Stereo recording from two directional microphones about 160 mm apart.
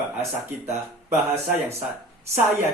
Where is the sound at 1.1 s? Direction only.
40° right (ahead or behind).